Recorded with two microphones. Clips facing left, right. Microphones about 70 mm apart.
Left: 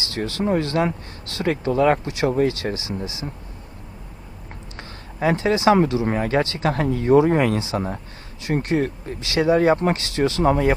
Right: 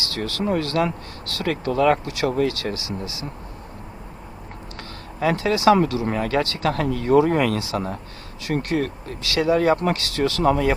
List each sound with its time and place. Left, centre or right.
0.0 s speech: left
4.8 s speech: left